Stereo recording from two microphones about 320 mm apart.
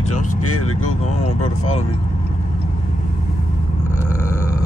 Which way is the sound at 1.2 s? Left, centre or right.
Centre.